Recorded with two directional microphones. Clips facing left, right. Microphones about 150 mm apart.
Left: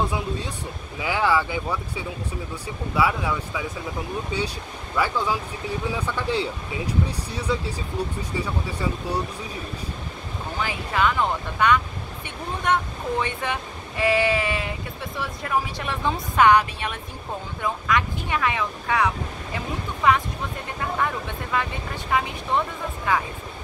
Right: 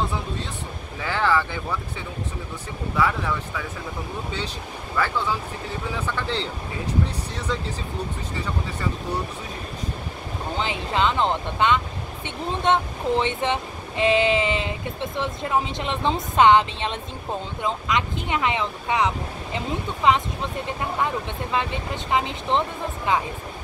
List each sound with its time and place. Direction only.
1.0 s speech: 10° left (ahead or behind)
4.9 s speech: 15° left (ahead or behind)
10.6 s speech: 25° right (ahead or behind)